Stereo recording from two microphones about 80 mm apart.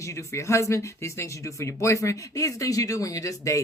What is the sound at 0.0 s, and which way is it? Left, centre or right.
Speech, left.